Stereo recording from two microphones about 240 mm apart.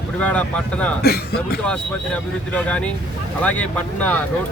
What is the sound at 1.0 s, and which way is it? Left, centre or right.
Speech, left.